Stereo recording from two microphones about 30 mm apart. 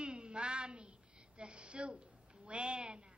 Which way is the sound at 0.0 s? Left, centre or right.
Right.